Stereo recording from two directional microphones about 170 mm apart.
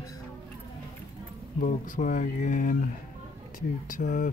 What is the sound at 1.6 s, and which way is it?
Speech, 50° left (ahead or behind).